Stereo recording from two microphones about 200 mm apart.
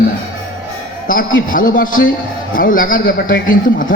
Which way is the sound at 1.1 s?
45° left (ahead or behind).